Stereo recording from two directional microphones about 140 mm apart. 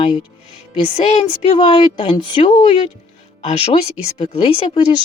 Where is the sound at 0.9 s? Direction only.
45° left (ahead or behind).